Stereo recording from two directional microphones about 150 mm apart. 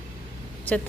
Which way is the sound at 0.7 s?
10° left (ahead or behind).